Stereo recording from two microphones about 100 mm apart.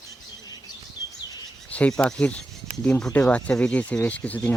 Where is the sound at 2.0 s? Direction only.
10° left (ahead or behind).